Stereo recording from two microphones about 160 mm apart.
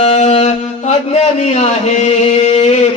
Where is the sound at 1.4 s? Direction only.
45° left (ahead or behind).